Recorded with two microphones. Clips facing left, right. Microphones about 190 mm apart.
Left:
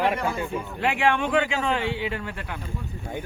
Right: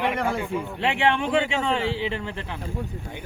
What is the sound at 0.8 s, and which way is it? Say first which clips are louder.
A man's voice: even; 25° right (ahead or behind).